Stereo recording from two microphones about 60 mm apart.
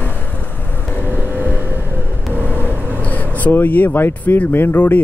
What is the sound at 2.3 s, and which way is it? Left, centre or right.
Vehicle, right.